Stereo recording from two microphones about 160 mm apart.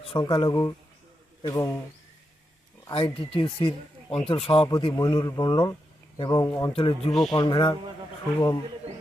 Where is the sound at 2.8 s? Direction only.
35° left (ahead or behind).